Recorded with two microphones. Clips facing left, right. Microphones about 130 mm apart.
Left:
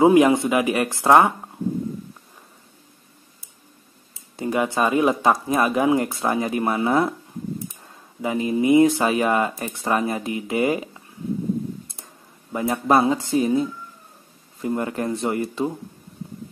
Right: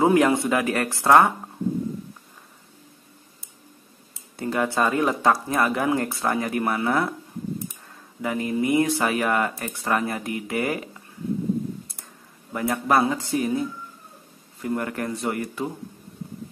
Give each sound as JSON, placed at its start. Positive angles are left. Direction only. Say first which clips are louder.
{"t": 0.0, "sound": "speech", "louder": "left 4 dB", "side_deg": 15}
{"t": 4.4, "sound": "speech", "louder": "left 2 dB", "side_deg": 15}
{"t": 8.2, "sound": "speech", "louder": "left 3 dB", "side_deg": 20}
{"t": 12.5, "sound": "speech", "louder": "left 2 dB", "side_deg": 20}